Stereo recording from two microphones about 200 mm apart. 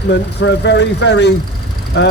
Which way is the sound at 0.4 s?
60° left (ahead or behind).